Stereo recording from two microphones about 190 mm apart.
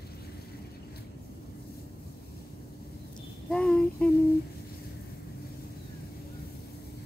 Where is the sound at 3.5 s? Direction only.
5° left (ahead or behind).